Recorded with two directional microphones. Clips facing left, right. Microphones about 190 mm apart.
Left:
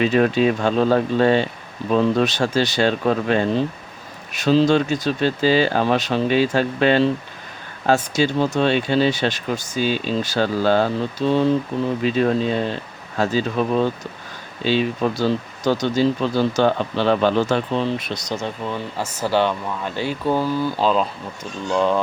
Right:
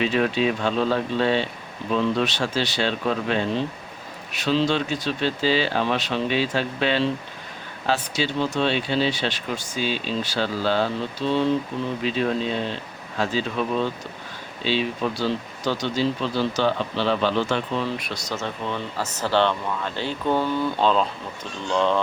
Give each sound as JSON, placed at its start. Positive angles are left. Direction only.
{"t": 0.0, "sound": "speech", "side_deg": 45}
{"t": 17.7, "sound": "speech", "side_deg": 25}